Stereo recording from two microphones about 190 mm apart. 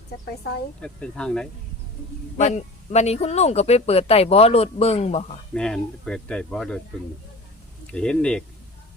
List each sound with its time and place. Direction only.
0.8 s speech: 5° left (ahead or behind)
2.4 s speech: 35° left (ahead or behind)
5.5 s speech: 5° left (ahead or behind)
7.9 s speech: 5° left (ahead or behind)